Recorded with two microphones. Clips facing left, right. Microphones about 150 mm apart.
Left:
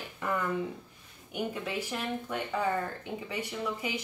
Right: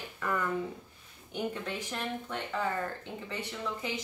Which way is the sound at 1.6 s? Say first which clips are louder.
Left 2 dB; 10° left (ahead or behind).